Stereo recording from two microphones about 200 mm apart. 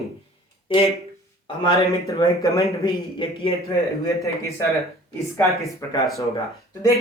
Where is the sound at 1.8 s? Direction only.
15° left (ahead or behind).